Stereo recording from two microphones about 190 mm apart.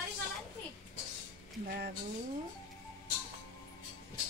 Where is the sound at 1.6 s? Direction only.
55° right (ahead or behind).